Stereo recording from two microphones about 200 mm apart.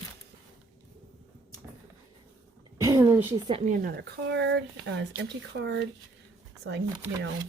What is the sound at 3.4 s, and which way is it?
Speech, 30° right (ahead or behind).